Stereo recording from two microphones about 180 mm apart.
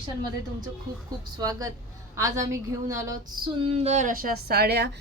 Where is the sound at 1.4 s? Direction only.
20° right (ahead or behind).